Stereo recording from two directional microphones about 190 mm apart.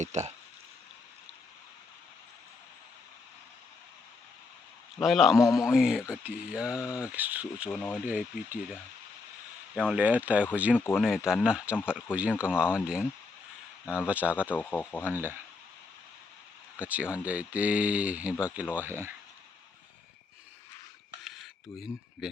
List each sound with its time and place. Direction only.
0.0 s speech: 35° right (ahead or behind)
4.9 s speech: centre (ahead or behind)
5.4 s speech: 15° left (ahead or behind)
5.7 s speech: 5° right (ahead or behind)
7.7 s speech: 10° left (ahead or behind)
8.0 s speech: 5° right (ahead or behind)
10.8 s speech: 10° left (ahead or behind)
11.0 s speech: 5° right (ahead or behind)
13.8 s speech: 10° left (ahead or behind)
14.1 s speech: 5° right (ahead or behind)
14.5 s speech: 10° left (ahead or behind)
15.0 s speech: 10° right (ahead or behind)
16.7 s speech: 5° right (ahead or behind)
21.2 s a sound: centre (ahead or behind)